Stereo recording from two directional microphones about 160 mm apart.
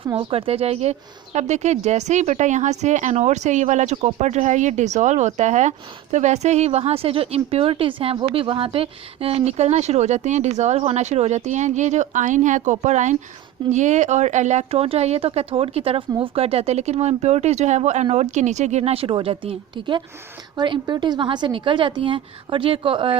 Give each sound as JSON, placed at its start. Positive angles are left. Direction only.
{"t": 0.2, "sound": "speech", "side_deg": -35}